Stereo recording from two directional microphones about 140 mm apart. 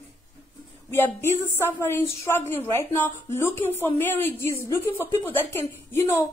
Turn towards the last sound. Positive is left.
turn(degrees=15)  # may be behind; listen again after turning